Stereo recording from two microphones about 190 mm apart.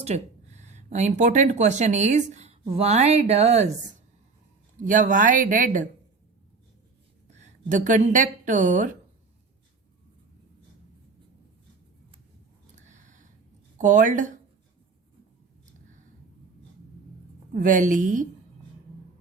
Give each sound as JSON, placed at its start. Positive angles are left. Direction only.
{"t": 0.0, "sound": "speech", "side_deg": -35}
{"t": 4.8, "sound": "speech", "side_deg": -40}
{"t": 7.3, "sound": "a woman's voice", "side_deg": -40}
{"t": 12.7, "sound": "a sound", "side_deg": -40}
{"t": 13.7, "sound": "speech", "side_deg": -45}
{"t": 17.5, "sound": "speech", "side_deg": -45}